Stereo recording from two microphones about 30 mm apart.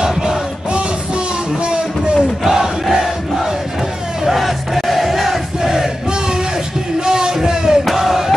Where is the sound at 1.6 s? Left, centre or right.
Right.